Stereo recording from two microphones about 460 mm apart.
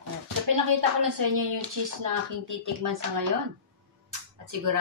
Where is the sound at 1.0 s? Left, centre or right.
Right.